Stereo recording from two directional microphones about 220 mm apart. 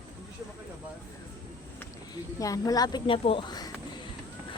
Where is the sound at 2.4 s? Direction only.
15° left (ahead or behind).